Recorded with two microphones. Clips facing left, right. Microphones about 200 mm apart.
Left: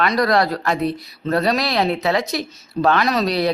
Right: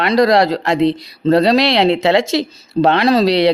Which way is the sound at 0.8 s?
90° right.